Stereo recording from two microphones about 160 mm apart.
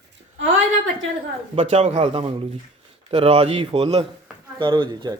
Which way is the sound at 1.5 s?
40° right (ahead or behind).